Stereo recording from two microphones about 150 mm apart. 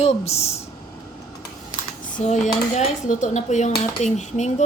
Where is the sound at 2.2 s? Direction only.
50° left (ahead or behind).